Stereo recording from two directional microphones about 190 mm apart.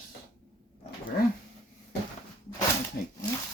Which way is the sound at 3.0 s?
50° left (ahead or behind).